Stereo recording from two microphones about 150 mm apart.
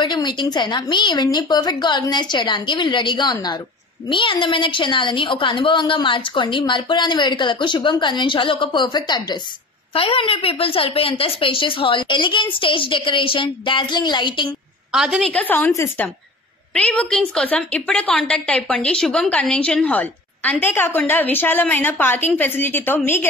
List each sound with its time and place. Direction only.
0.0 s a woman's voice: 30° left (ahead or behind)
14.9 s a woman's voice: 5° right (ahead or behind); by 23.2 s 15° left (ahead or behind)